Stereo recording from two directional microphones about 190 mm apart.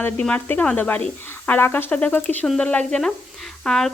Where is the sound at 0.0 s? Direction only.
5° left (ahead or behind).